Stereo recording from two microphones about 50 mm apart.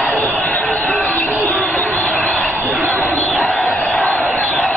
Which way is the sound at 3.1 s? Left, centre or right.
Left.